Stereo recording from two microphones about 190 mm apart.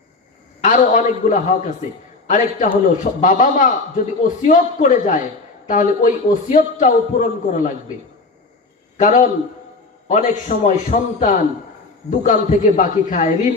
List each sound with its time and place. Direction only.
0.6 s a man's voice: 40° left (ahead or behind)
9.0 s a man's voice: 40° left (ahead or behind)